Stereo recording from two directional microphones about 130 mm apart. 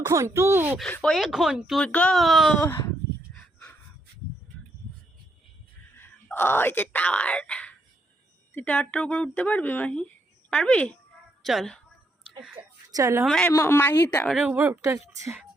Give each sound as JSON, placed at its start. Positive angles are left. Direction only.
{"t": 0.0, "sound": "speech", "side_deg": -20}
{"t": 1.0, "sound": "speech", "side_deg": 0}
{"t": 1.8, "sound": "speech", "side_deg": 10}
{"t": 2.6, "sound": "speech", "side_deg": 20}
{"t": 6.0, "sound": "speech", "side_deg": 15}
{"t": 12.6, "sound": "a sound", "side_deg": -45}
{"t": 12.9, "sound": "a woman's voice", "side_deg": -25}
{"t": 13.2, "sound": "speech", "side_deg": 5}
{"t": 13.5, "sound": "speech", "side_deg": 20}
{"t": 14.3, "sound": "speech", "side_deg": -5}
{"t": 14.5, "sound": "speech", "side_deg": -15}